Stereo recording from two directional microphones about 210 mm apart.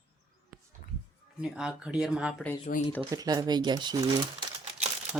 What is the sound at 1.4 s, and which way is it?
Speech, 5° right (ahead or behind).